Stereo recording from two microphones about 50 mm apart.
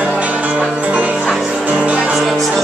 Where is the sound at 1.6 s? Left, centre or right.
Right.